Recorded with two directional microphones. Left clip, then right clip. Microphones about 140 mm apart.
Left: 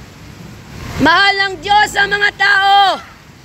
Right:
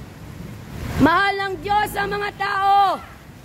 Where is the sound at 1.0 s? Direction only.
10° right (ahead or behind).